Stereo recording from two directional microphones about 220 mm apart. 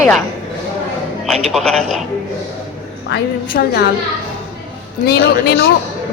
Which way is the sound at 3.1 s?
45° left (ahead or behind).